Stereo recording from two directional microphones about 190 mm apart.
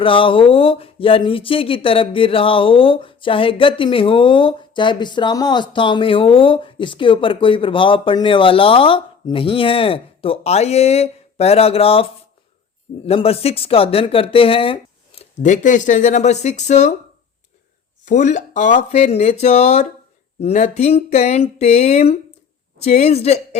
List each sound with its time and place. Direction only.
0.0 s speech: 30° left (ahead or behind)
13.1 s speech: 30° left (ahead or behind)
18.0 s speech: 40° left (ahead or behind)